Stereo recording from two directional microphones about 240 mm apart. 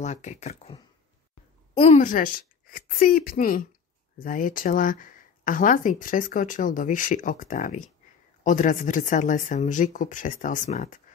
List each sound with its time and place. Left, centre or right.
0.0 s speech: left
1.8 s speech: left